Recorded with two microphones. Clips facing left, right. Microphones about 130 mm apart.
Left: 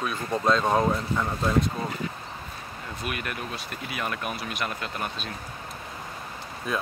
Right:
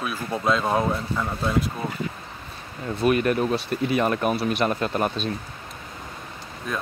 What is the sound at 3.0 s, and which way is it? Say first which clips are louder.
Speech: right 14 dB; 35° right (ahead or behind).